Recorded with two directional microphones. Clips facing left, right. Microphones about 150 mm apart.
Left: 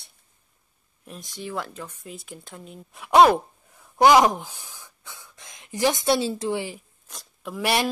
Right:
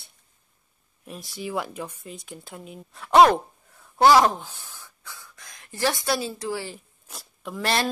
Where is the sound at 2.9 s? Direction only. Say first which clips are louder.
Even; 15° left (ahead or behind).